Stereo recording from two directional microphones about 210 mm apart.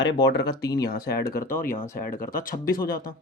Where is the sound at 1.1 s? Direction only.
45° left (ahead or behind).